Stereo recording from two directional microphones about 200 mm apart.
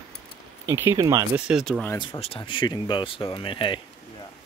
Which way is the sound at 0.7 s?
15° right (ahead or behind).